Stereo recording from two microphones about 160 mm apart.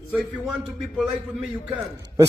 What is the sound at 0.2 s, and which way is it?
A man's voice, 5° left (ahead or behind).